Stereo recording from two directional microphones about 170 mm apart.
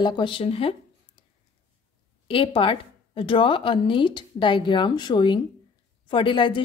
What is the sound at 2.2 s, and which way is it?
A woman's voice, 30° left (ahead or behind).